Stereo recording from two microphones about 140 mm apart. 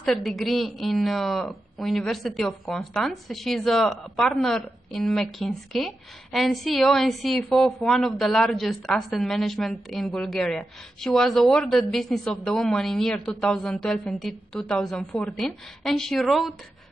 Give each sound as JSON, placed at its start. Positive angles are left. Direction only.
{"t": 0.0, "sound": "a woman's voice", "side_deg": 0}